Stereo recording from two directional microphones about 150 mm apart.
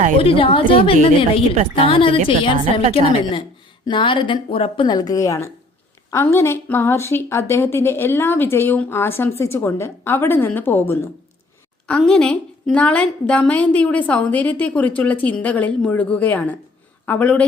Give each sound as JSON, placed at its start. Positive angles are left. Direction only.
{"t": 0.2, "sound": "speech", "side_deg": 35}
{"t": 3.8, "sound": "a woman's voice", "side_deg": 35}